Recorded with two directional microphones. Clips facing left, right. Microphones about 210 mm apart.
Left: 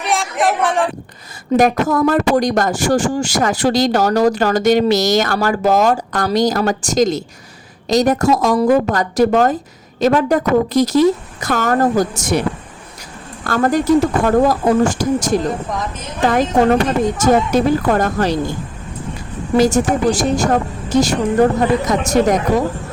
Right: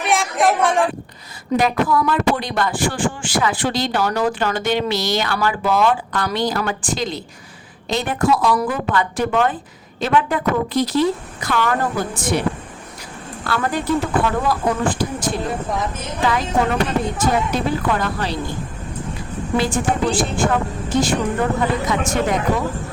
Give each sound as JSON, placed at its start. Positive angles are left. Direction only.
{"t": 0.0, "sound": "a sound", "side_deg": 0}
{"t": 1.5, "sound": "a woman's voice", "side_deg": 45}
{"t": 13.5, "sound": "speech", "side_deg": 45}
{"t": 19.5, "sound": "a woman's voice", "side_deg": 40}